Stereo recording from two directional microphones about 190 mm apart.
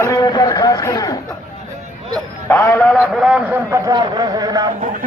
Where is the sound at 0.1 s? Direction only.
20° left (ahead or behind).